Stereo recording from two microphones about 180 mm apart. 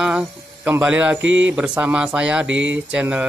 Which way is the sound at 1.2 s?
90° right.